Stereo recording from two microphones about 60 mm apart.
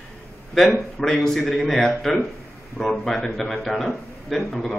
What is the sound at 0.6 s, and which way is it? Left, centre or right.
A man's voice, centre.